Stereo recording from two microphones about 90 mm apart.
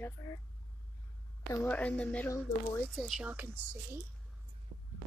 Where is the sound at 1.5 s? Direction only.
20° left (ahead or behind).